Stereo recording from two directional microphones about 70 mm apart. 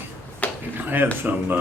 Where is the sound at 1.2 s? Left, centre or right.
Right.